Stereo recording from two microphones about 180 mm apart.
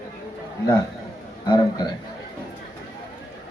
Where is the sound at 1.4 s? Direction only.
20° left (ahead or behind).